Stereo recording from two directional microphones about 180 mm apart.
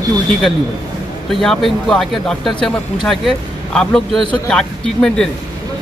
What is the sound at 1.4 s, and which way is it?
Speech, centre (ahead or behind).